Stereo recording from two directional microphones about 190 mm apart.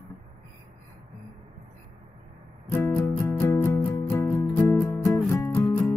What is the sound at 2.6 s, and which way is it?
Music, 15° left (ahead or behind).